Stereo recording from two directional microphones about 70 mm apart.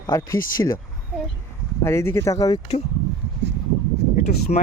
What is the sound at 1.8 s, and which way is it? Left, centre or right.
Speech, left.